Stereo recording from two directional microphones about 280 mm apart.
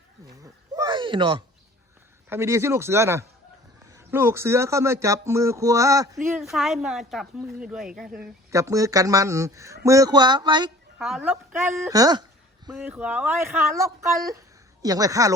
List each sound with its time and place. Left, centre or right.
0.4 s a sound: centre
2.3 s speech: centre
10.9 s a woman's voice: centre